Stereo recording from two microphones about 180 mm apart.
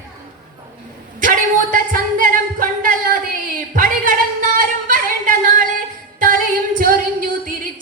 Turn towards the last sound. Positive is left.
turn(degrees=-50)  # may be behind; listen again after turning